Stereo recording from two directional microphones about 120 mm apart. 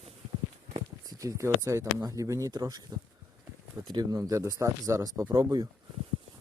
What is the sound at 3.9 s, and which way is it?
Speech, 35° right (ahead or behind).